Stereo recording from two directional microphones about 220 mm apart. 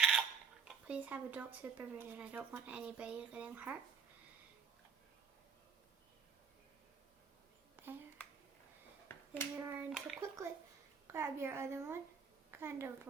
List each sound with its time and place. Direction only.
0.0 s speech: 5° right (ahead or behind)
7.8 s a sound: 10° right (ahead or behind)
9.0 s finger snapping: 10° left (ahead or behind)
9.6 s a woman's voice: 10° right (ahead or behind)